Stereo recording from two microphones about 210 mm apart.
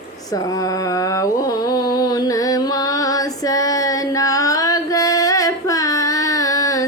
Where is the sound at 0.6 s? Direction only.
15° left (ahead or behind).